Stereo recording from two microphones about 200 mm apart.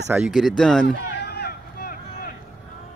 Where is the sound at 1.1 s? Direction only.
55° left (ahead or behind).